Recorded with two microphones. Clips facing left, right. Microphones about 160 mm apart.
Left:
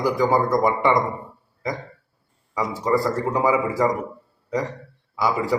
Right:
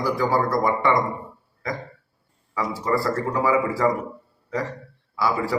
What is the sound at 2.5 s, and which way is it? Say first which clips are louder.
A man's voice: left 2 dB; 20° left (ahead or behind).